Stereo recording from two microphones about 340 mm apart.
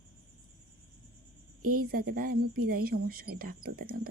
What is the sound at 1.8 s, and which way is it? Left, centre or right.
Speech, right.